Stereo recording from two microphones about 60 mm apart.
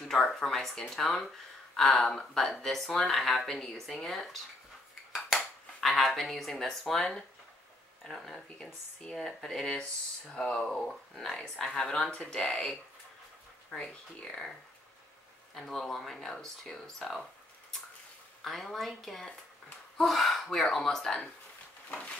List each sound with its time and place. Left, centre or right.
0.1 s speech: centre
5.8 s speech: centre
15.5 s speech: centre
21.9 s a sound: left